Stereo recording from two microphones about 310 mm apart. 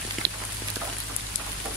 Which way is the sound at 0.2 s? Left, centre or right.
Right.